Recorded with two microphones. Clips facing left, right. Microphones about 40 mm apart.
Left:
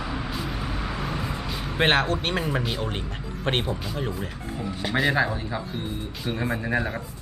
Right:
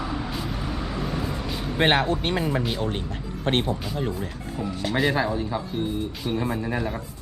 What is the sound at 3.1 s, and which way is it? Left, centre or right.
Speech, left.